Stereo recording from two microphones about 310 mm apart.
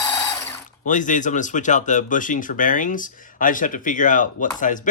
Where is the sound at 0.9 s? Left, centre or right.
Left.